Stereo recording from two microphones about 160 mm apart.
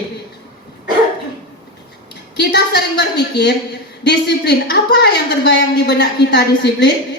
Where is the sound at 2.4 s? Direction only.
90° left.